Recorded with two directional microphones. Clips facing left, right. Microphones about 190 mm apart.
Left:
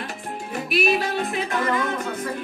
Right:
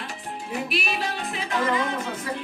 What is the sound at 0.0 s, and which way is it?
Music, 55° left (ahead or behind).